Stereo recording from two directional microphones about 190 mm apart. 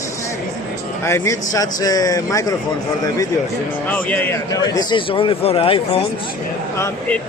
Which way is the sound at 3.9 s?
10° left (ahead or behind).